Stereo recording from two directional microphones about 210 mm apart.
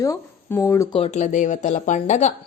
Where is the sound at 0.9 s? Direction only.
30° left (ahead or behind).